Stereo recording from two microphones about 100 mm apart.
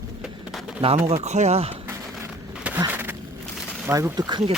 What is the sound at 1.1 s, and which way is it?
Speech, 90° right.